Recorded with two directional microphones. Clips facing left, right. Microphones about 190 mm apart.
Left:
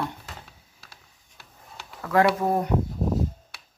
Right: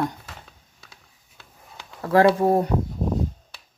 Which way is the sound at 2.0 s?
30° right (ahead or behind).